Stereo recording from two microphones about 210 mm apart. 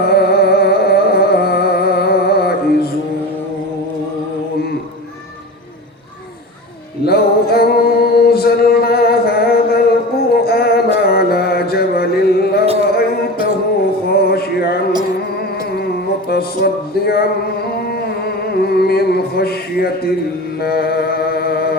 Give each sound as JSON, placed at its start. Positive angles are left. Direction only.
{"t": 0.0, "sound": "music", "side_deg": 50}
{"t": 7.0, "sound": "music", "side_deg": 50}
{"t": 12.9, "sound": "a sound", "side_deg": 50}
{"t": 14.1, "sound": "music", "side_deg": 50}
{"t": 16.3, "sound": "music", "side_deg": 50}
{"t": 20.6, "sound": "mantra", "side_deg": 50}